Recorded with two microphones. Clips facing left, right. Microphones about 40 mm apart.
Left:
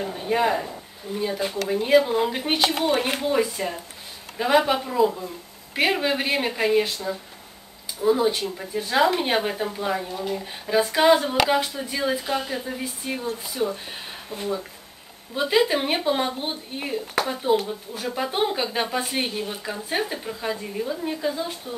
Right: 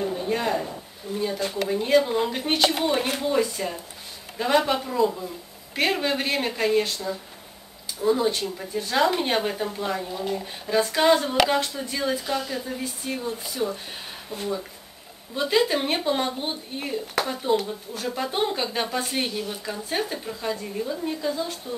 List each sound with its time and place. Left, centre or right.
0.3 s speech: centre
19.3 s speech: left
19.6 s speech: centre